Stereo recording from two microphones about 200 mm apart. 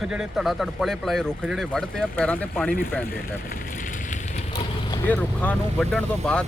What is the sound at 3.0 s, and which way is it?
Vehicle, 45° left (ahead or behind).